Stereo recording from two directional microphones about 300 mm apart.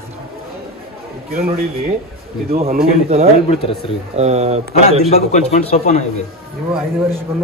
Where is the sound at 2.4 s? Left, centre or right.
Right.